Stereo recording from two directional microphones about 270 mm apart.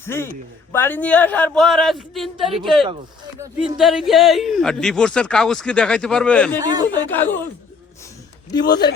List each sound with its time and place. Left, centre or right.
0.0 s speech: centre
6.6 s speech: centre
7.1 s speech: centre
8.6 s speech: left